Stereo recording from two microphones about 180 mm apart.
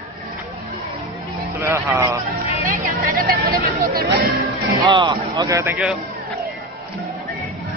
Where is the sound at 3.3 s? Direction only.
55° right (ahead or behind).